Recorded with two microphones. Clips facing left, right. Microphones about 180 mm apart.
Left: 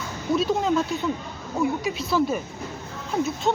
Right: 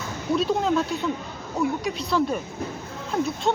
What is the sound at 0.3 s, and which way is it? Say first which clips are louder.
Speech: even; centre (ahead or behind).